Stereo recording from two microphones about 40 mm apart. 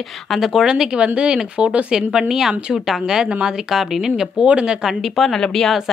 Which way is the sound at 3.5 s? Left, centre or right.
Centre.